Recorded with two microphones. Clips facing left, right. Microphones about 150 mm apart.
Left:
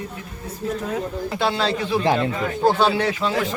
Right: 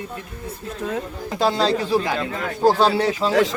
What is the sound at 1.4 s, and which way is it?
Speech, 35° right (ahead or behind).